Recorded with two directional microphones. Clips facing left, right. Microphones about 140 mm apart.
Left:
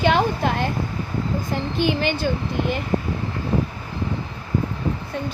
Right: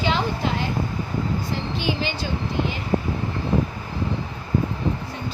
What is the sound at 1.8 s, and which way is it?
A woman's voice, 55° left (ahead or behind).